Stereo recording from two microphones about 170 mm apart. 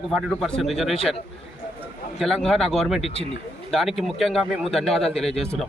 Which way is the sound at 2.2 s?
Centre (ahead or behind).